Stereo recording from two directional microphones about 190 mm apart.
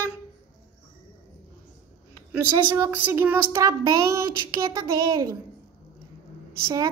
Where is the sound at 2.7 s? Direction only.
10° right (ahead or behind).